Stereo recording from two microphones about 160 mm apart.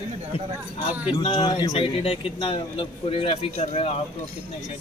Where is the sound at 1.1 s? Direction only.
35° left (ahead or behind).